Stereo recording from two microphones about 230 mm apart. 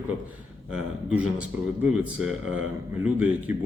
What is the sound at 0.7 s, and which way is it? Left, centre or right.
Speech, centre.